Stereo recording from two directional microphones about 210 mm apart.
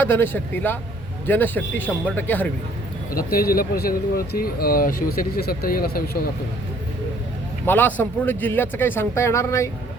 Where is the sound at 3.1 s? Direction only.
45° left (ahead or behind).